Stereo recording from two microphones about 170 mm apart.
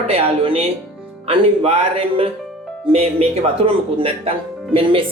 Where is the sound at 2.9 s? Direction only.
35° right (ahead or behind).